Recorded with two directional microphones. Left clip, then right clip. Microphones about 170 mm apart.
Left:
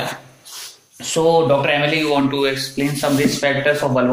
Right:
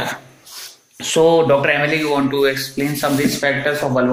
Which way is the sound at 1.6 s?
25° right (ahead or behind).